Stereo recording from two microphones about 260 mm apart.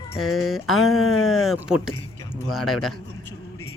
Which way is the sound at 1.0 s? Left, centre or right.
Left.